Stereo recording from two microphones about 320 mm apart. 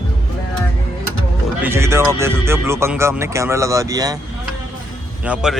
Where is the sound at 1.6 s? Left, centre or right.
Centre.